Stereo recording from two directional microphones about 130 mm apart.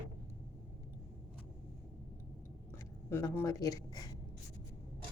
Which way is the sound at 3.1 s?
20° left (ahead or behind).